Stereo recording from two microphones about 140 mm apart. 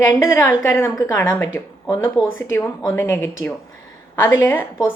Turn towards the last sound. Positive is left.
turn(degrees=15)  # may be behind; listen again after turning